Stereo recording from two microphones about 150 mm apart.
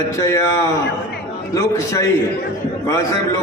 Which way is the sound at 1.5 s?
20° left (ahead or behind).